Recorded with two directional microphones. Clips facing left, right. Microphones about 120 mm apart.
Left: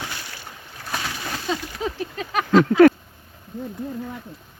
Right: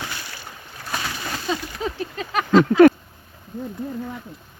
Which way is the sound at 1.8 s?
5° left (ahead or behind).